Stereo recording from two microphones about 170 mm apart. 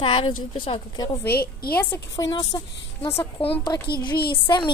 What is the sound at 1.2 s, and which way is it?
Speech, 65° left (ahead or behind).